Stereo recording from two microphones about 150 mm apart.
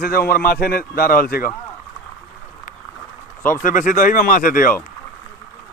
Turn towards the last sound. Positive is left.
turn(degrees=65)  # may be behind; listen again after turning